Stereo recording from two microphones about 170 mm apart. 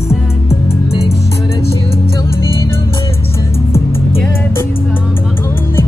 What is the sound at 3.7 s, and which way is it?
Music, 15° left (ahead or behind).